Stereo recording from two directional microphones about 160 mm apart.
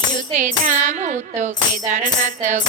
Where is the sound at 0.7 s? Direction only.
50° right (ahead or behind).